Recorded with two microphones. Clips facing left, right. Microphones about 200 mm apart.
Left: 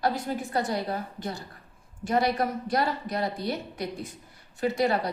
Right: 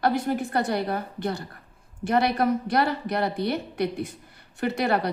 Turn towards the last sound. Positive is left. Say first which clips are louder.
# right 1 dB
turn(degrees=-65)  # may be behind; listen again after turning